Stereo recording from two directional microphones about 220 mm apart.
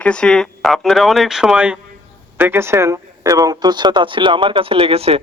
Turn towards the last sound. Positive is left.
turn(degrees=-25)  # may be behind; listen again after turning